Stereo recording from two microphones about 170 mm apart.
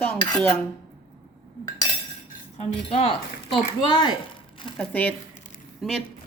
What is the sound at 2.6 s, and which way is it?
Speech, 35° left (ahead or behind).